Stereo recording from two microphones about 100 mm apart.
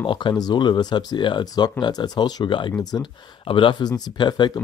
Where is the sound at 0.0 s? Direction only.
50° left (ahead or behind).